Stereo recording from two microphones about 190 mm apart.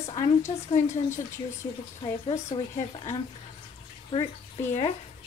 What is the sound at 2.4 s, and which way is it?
Speech, 30° left (ahead or behind).